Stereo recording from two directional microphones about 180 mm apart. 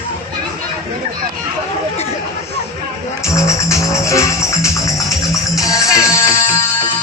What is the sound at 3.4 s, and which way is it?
Music, 15° left (ahead or behind).